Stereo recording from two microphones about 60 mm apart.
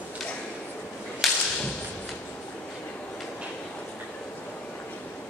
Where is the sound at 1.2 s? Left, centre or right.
Centre.